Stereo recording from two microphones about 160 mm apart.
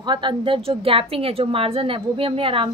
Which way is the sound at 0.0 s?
30° right (ahead or behind).